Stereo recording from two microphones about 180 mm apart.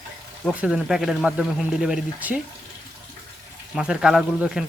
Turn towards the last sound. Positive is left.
turn(degrees=0)  # may be behind; listen again after turning